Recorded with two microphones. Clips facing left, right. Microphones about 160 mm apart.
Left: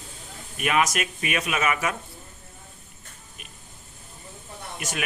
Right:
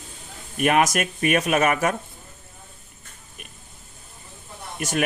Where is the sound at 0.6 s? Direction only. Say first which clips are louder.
Right 4 dB; 45° right (ahead or behind).